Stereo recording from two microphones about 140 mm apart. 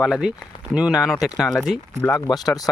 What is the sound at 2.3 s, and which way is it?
Speech, 25° left (ahead or behind).